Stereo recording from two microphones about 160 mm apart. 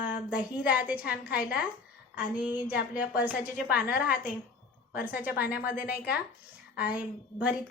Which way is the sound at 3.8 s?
70° left (ahead or behind).